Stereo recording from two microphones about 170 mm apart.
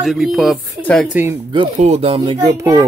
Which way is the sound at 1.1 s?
10° right (ahead or behind).